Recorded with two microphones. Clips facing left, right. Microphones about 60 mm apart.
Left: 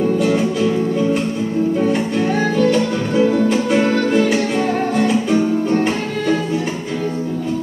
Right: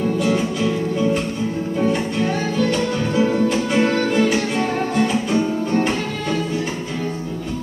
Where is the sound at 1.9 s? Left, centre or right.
Centre.